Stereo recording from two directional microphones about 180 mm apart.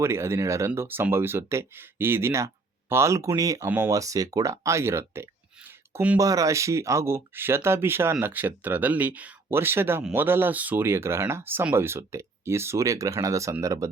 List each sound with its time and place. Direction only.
0.0 s speech: 15° right (ahead or behind)